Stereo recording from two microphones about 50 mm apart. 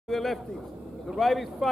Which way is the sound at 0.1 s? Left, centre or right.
Centre.